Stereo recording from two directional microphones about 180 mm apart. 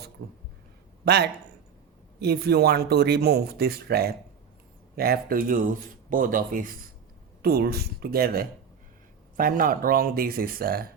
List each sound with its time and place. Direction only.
1.0 s speech: 65° right (ahead or behind); by 6.7 s 50° right (ahead or behind)
7.4 s speech: 60° right (ahead or behind)